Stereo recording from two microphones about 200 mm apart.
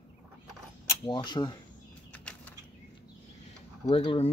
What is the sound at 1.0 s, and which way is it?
Speech, 20° left (ahead or behind).